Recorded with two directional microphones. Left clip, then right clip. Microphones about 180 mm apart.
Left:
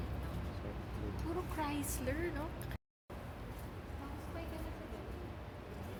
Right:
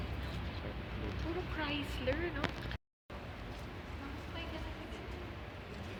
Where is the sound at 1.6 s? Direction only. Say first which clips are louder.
Right 1 dB; 90° left.